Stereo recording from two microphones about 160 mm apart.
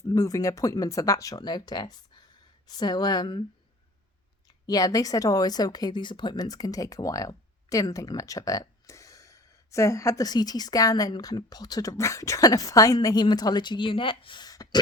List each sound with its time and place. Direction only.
0.0 s speech: 20° left (ahead or behind)
4.6 s speech: 20° left (ahead or behind)